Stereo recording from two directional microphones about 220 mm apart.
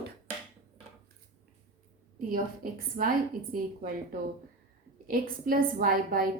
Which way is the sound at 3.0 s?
40° right (ahead or behind).